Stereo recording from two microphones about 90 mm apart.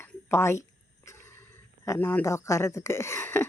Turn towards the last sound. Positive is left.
turn(degrees=25)  # may be behind; listen again after turning